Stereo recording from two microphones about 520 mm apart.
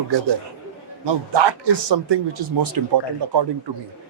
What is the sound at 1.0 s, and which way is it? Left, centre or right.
A man's voice, right.